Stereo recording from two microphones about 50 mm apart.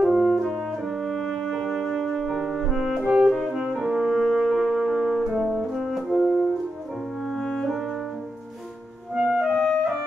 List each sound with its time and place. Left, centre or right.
0.1 s french horn: centre
0.6 s music: centre
3.0 s brass instrument: right
3.3 s music: centre
3.5 s brass instrument: centre
7.2 s music: centre
9.1 s clarinet: centre